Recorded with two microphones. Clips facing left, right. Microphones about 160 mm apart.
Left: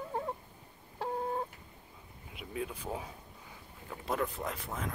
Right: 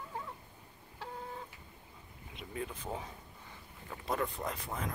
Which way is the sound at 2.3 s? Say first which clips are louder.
Left 2 dB; 5° left (ahead or behind).